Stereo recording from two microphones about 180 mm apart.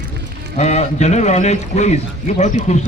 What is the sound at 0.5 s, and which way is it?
A man's voice, 40° left (ahead or behind).